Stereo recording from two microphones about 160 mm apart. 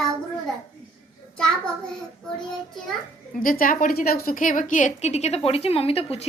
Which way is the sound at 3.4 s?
60° left (ahead or behind).